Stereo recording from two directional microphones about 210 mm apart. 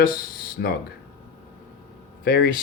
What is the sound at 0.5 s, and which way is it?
Speech, 45° left (ahead or behind).